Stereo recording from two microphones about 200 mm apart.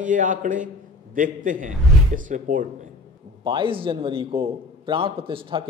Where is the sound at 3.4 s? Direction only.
25° right (ahead or behind).